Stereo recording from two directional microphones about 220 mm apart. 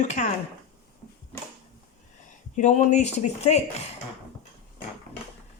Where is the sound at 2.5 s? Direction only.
35° left (ahead or behind).